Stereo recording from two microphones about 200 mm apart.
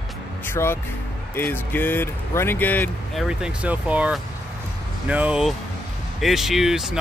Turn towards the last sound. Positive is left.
turn(degrees=0)  # may be behind; listen again after turning